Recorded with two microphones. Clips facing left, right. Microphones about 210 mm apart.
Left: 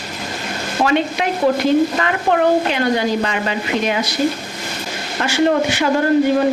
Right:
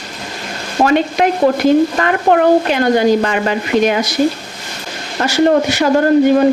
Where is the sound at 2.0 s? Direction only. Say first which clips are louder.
Right 4 dB; 50° right (ahead or behind).